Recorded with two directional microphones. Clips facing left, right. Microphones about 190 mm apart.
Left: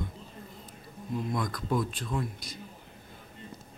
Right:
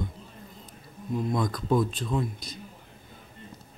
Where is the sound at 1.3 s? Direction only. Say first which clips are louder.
Right 5 dB; 25° right (ahead or behind).